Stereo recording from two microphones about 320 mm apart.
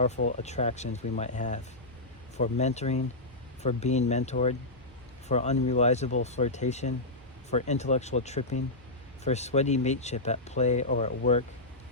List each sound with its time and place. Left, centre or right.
0.3 s speech: left